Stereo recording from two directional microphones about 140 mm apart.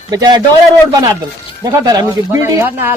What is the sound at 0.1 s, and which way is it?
Speech, 30° right (ahead or behind).